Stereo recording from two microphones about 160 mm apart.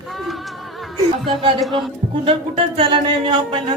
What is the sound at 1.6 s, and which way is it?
Speech, centre (ahead or behind).